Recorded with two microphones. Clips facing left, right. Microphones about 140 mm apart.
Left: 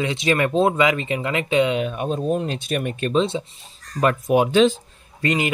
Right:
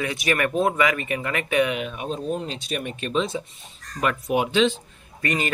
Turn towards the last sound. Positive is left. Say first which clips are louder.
# left 4 dB
turn(degrees=20)  # may be behind; listen again after turning